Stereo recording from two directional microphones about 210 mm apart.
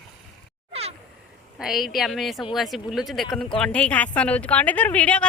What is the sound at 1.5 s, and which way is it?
A woman's voice, centre (ahead or behind).